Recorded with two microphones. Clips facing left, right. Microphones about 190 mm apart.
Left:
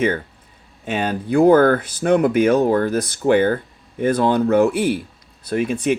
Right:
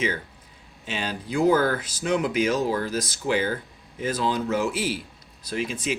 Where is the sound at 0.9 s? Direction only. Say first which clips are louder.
Left 9 dB; 55° left (ahead or behind).